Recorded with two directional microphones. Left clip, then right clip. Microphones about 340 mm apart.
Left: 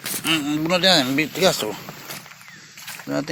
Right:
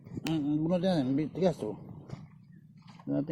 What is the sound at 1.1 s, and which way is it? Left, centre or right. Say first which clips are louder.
Speech: left 11 dB; left.